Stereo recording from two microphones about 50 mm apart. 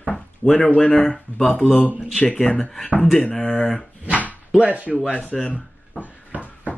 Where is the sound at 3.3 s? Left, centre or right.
Centre.